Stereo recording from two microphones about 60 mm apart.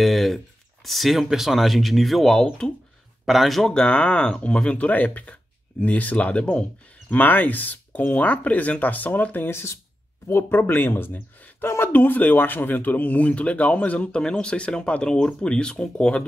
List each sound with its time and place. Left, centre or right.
0.0 s a sound: centre
0.8 s speech: centre
2.4 s speech: centre
3.3 s speech: centre
3.7 s speech: centre
7.2 s speech: left; by 16.3 s centre